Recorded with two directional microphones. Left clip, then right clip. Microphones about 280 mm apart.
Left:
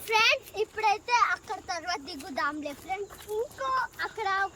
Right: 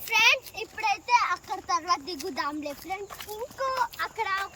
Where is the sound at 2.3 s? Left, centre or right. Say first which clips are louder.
Left 2 dB; centre.